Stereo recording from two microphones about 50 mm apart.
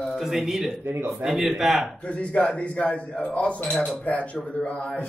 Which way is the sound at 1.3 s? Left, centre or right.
Centre.